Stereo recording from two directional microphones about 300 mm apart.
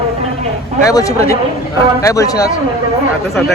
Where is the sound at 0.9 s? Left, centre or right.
Centre.